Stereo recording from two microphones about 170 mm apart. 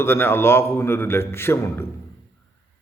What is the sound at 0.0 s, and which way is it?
A man's voice, 15° left (ahead or behind).